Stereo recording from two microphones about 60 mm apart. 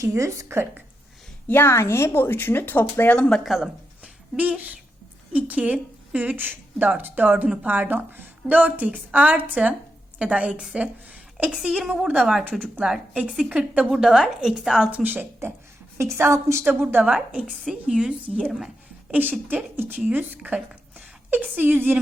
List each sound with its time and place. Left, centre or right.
0.4 s speech: right
1.5 s speech: left
1.7 s speech: left
3.2 s speech: centre
3.4 s speech: centre
4.0 s a sound: right
5.3 s a woman's voice: right
11.1 s a sound: right
11.6 s a woman's voice: centre
12.5 s a woman's voice: right; by 14.8 s centre
14.8 s speech: right
16.1 s a woman's voice: right
16.9 s a woman's voice: right
19.1 s a woman's voice: right